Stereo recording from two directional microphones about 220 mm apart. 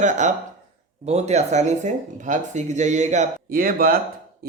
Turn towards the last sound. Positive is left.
turn(degrees=-40)  # may be behind; listen again after turning